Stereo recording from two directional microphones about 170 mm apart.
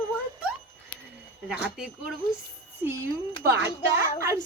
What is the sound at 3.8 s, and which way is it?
Speech, 15° right (ahead or behind).